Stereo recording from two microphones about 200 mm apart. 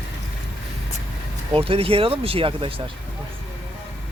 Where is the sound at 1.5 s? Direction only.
30° right (ahead or behind).